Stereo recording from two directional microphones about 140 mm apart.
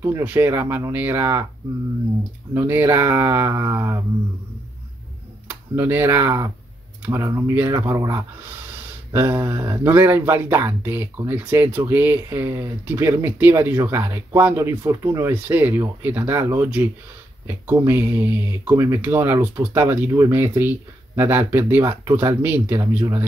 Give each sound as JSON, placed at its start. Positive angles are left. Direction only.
{"t": 0.2, "sound": "speech", "side_deg": -15}
{"t": 2.5, "sound": "speech", "side_deg": -15}
{"t": 5.8, "sound": "speech", "side_deg": -15}